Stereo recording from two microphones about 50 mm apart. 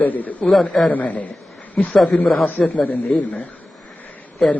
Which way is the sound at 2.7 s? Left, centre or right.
Left.